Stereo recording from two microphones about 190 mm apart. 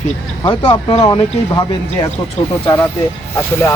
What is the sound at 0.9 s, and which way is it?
Speech, 25° left (ahead or behind).